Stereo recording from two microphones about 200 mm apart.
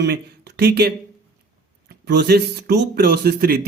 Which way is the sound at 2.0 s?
55° right (ahead or behind).